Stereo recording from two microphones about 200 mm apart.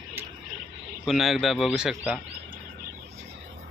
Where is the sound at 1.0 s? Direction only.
Centre (ahead or behind).